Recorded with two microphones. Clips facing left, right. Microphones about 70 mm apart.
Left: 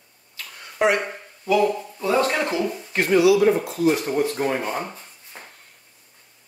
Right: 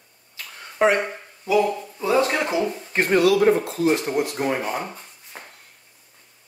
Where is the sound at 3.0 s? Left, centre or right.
Right.